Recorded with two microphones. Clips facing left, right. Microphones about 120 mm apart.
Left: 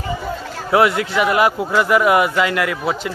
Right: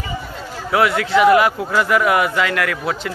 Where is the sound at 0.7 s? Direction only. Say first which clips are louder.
Left 1 dB; 25° left (ahead or behind).